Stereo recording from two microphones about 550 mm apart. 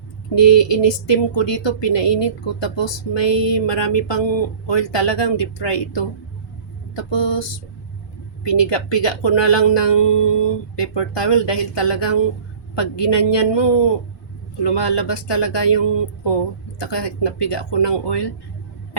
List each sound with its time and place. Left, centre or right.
0.9 s speech: left
8.4 s speech: left